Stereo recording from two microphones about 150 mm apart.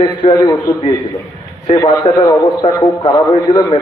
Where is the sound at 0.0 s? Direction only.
30° left (ahead or behind).